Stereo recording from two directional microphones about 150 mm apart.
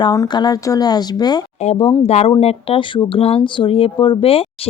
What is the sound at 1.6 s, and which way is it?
Speech, 40° left (ahead or behind).